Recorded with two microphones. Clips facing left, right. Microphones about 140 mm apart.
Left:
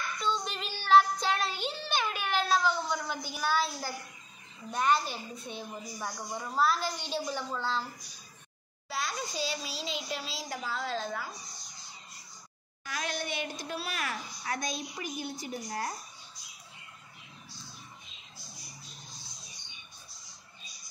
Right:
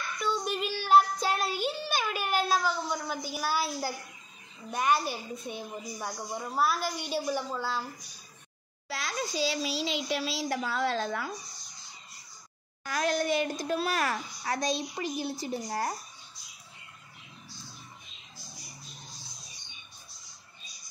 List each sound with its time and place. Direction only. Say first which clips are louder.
0.2 s child singing: right 4 dB; 5° right (ahead or behind)
4.6 s a woman's voice: right 1 dB; 10° right (ahead or behind)
8.8 s a child's voice: right 1 dB; 90° right; by 11.2 s 70° right (ahead or behind)
12.8 s a woman's voice: right 8 dB; 45° right (ahead or behind)